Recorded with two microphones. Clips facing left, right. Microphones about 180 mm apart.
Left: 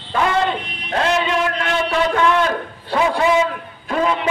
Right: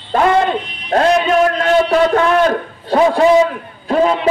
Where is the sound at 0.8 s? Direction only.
35° right (ahead or behind).